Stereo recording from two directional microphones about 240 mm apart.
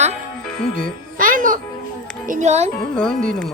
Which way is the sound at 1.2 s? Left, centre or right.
Right.